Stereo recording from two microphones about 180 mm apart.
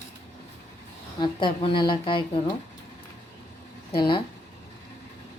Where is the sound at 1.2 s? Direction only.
25° left (ahead or behind).